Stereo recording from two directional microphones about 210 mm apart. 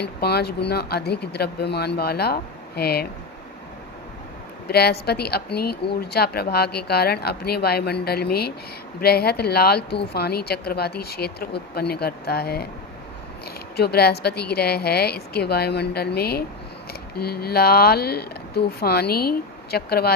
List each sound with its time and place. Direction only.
0.0 s a woman's voice: 50° left (ahead or behind)
4.7 s a woman's voice: 50° left (ahead or behind)
13.7 s a woman's voice: 50° left (ahead or behind)